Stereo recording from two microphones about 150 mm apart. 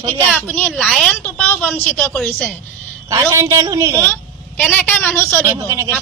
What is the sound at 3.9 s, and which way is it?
A woman's voice, 15° left (ahead or behind).